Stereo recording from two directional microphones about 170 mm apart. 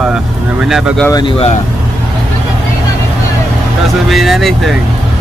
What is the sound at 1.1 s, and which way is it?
Speech, 30° left (ahead or behind).